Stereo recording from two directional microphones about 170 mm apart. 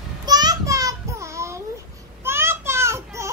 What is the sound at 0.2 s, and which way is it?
Child singing, 25° right (ahead or behind).